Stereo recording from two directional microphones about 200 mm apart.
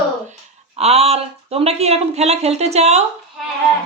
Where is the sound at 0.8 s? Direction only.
30° right (ahead or behind).